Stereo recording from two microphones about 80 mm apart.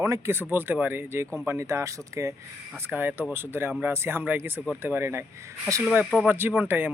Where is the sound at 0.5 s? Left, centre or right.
Right.